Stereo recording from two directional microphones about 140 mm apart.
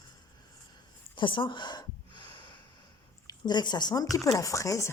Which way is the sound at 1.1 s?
35° left (ahead or behind).